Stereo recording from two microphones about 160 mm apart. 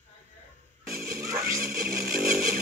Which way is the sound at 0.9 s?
65° right (ahead or behind).